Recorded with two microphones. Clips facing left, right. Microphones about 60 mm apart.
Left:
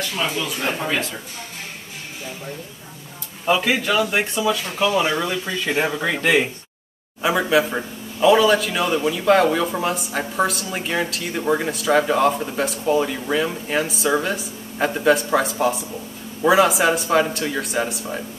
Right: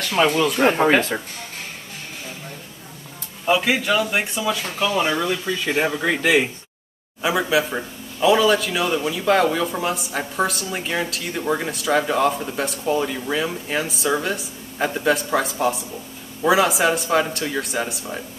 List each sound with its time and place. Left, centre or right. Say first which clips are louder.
0.0 s speech: right 6 dB; right
3.4 s a man's voice: even; centre